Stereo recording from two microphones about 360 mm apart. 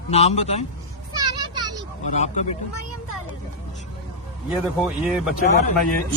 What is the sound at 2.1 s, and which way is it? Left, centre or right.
Speech, centre.